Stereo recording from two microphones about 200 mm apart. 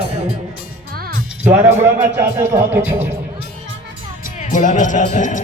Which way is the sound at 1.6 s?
10° right (ahead or behind).